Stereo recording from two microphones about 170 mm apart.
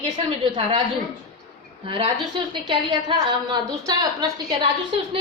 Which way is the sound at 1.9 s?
30° right (ahead or behind).